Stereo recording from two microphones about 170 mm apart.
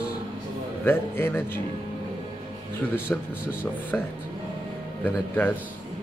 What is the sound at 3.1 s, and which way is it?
Speech, 10° left (ahead or behind).